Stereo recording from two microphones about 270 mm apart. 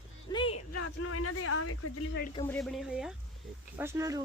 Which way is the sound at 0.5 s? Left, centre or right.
Left.